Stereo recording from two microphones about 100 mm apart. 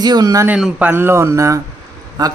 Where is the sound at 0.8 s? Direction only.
20° right (ahead or behind); by 2.3 s 40° right (ahead or behind).